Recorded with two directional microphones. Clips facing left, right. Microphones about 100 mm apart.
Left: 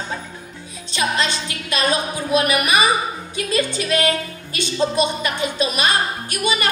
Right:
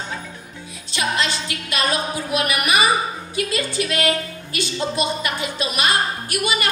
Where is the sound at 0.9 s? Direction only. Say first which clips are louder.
Left 1 dB; 25° left (ahead or behind).